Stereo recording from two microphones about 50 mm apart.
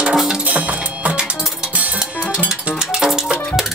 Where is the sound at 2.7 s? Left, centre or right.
Centre.